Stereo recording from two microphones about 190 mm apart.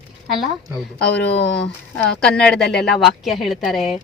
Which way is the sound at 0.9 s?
60° left (ahead or behind).